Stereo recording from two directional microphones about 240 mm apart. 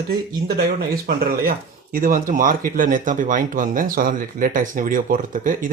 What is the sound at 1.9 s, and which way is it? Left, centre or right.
Speech, right.